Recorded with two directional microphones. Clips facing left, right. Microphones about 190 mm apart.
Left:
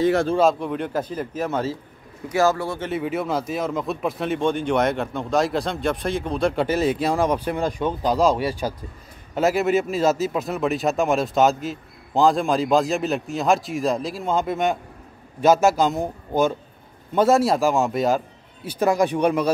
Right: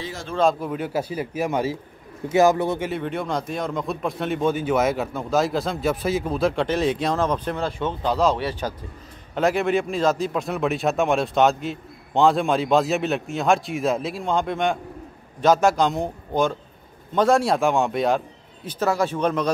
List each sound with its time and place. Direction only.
0.0 s a man's voice: 55° left (ahead or behind)
0.4 s a man's voice: centre (ahead or behind); by 2.9 s 20° right (ahead or behind)
2.9 s a man's voice: 5° left (ahead or behind)